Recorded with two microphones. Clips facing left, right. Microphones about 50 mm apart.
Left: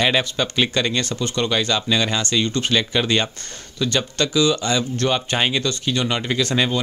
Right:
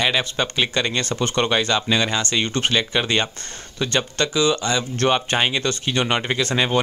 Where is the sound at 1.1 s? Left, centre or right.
Right.